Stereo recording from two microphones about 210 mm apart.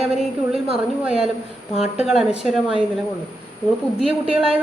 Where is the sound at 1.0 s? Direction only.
5° right (ahead or behind).